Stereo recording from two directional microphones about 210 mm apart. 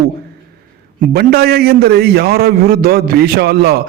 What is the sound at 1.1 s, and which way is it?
A man's voice, 45° right (ahead or behind).